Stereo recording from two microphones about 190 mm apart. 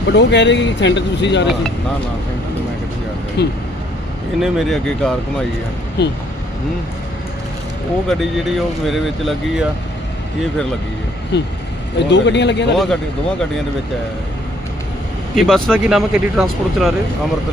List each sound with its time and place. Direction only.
0.1 s speech: 65° left (ahead or behind)
3.4 s speech: 60° left (ahead or behind)
4.4 s speech: centre (ahead or behind)
6.0 s speech: 60° left (ahead or behind)
8.0 s speech: centre (ahead or behind)
11.3 s speech: 65° left (ahead or behind)
12.7 s speech: centre (ahead or behind)
15.4 s speech: centre (ahead or behind)